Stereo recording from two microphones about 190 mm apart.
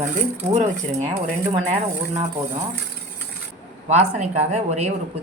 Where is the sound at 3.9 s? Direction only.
35° right (ahead or behind).